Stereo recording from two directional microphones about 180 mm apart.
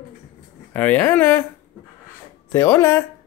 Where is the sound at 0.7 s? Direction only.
10° left (ahead or behind).